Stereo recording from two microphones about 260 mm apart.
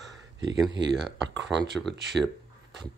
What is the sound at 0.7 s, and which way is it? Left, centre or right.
Speech, right.